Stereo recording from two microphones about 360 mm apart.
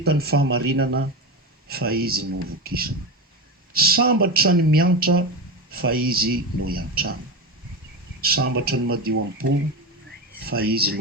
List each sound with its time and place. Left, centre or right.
0.0 s a man's voice: right
8.2 s a man's voice: right